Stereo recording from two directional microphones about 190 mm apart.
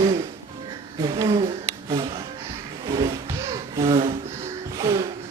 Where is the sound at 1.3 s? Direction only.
25° right (ahead or behind).